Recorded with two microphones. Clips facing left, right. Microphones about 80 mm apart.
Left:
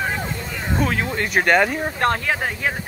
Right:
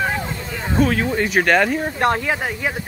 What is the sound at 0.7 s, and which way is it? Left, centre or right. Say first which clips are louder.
Speech: right 5 dB; centre.